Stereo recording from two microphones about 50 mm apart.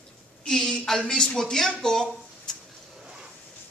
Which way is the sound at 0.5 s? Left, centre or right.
Centre.